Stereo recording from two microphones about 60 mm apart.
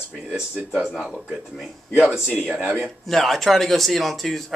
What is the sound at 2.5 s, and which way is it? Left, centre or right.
Speech, centre.